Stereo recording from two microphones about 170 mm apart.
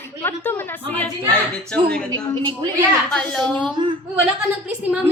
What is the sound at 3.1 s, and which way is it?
Speech, 5° left (ahead or behind).